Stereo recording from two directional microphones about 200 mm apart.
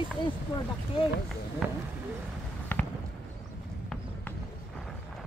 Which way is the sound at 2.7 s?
10° left (ahead or behind).